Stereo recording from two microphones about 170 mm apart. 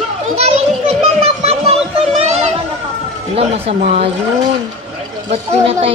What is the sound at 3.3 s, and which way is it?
Speech, 35° right (ahead or behind).